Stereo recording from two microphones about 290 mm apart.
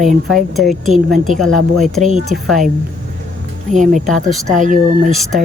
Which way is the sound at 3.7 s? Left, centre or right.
Right.